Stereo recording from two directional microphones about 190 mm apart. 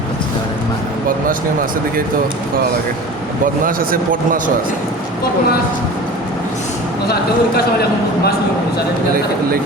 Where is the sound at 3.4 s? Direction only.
45° right (ahead or behind).